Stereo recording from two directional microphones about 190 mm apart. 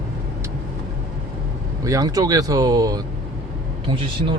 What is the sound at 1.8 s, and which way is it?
Speech, 20° right (ahead or behind).